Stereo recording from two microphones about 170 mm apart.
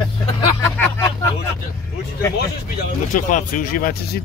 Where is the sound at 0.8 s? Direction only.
15° left (ahead or behind).